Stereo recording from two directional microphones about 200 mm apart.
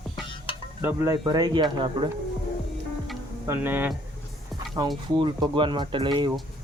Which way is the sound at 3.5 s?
10° right (ahead or behind).